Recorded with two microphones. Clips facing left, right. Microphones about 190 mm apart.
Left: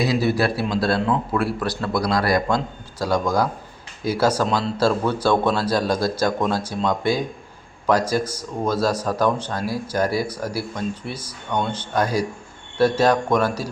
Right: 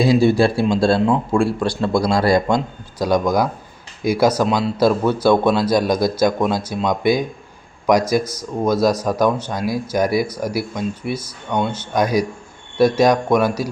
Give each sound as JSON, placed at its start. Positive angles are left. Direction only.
{"t": 0.0, "sound": "speech", "side_deg": -25}
{"t": 8.2, "sound": "speech", "side_deg": 10}
{"t": 8.6, "sound": "speech", "side_deg": -10}